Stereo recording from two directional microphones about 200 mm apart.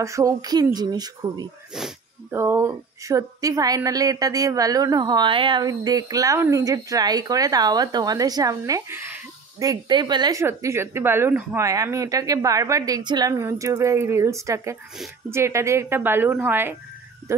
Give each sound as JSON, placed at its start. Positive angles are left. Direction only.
{"t": 0.0, "sound": "speech", "side_deg": -15}
{"t": 1.7, "sound": "speech", "side_deg": 0}
{"t": 2.3, "sound": "a woman's voice", "side_deg": -15}